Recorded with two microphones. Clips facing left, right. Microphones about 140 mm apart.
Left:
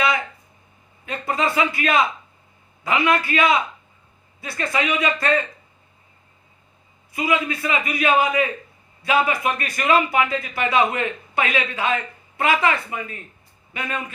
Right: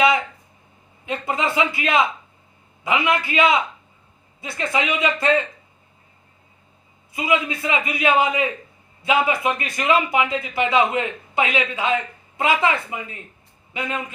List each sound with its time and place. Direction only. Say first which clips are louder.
1.0 s a man's voice: even; 20° right (ahead or behind)
7.1 s a man's voice: even; 20° right (ahead or behind)